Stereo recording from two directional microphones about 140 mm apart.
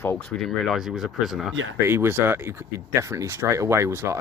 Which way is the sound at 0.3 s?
Centre (ahead or behind).